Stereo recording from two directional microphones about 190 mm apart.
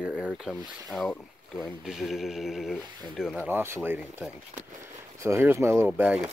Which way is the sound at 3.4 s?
10° right (ahead or behind).